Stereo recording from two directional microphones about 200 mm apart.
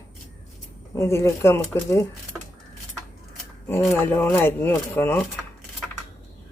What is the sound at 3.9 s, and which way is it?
Speech, 10° left (ahead or behind).